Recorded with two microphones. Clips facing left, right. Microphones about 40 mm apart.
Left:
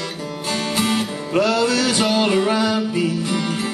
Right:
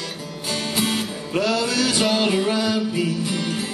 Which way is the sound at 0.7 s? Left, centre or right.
Centre.